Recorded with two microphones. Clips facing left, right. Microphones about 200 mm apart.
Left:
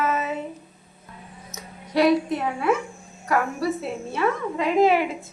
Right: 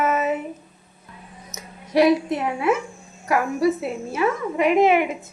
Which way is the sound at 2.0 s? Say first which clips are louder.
Right 2 dB; 20° right (ahead or behind).